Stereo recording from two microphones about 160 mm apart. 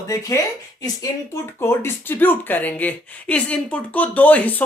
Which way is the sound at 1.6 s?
15° left (ahead or behind).